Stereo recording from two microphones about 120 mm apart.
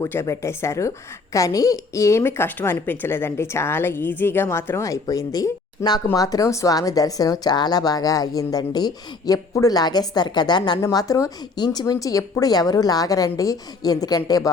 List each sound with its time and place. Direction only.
0.0 s a woman's voice: 25° left (ahead or behind)
10.8 s speech: 25° left (ahead or behind)